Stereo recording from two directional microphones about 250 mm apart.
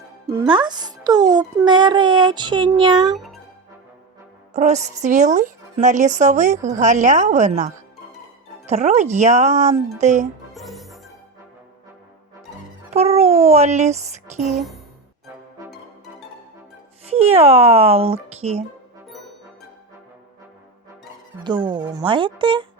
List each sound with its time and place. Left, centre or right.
0.3 s a child's voice: centre
3.2 s music: centre
4.5 s a woman's voice: right
10.5 s music: centre
12.9 s a child's voice: right
17.1 s a woman's voice: right
21.7 s a woman's voice: centre